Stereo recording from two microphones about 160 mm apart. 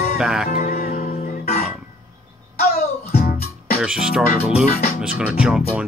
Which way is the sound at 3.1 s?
70° left (ahead or behind).